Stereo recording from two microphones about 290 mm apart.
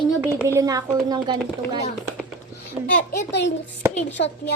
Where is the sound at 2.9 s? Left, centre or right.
Left.